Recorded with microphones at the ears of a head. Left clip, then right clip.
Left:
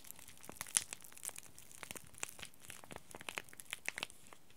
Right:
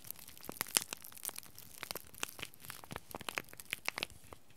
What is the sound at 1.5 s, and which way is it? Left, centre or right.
Crushing, right.